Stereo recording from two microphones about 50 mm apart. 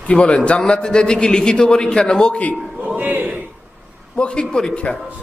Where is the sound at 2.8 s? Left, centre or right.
Right.